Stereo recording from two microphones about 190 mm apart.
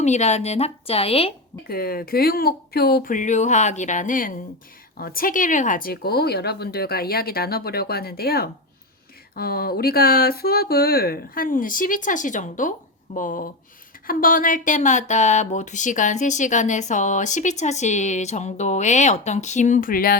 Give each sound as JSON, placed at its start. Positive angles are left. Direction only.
{"t": 0.0, "sound": "speech", "side_deg": 35}
{"t": 1.6, "sound": "speech", "side_deg": 55}